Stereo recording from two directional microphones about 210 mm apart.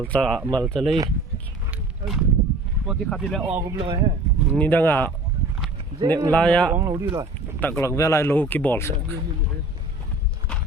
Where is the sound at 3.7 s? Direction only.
20° right (ahead or behind).